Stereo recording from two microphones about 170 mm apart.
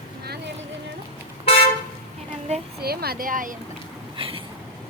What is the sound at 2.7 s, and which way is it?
Speech, 65° right (ahead or behind).